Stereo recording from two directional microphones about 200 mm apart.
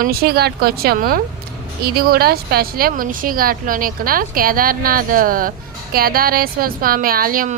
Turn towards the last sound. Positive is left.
turn(degrees=-45)  # may be behind; listen again after turning